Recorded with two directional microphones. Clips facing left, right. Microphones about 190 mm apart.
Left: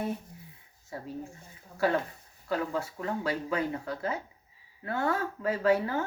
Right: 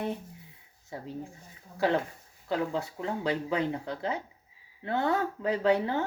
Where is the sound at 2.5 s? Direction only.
20° right (ahead or behind).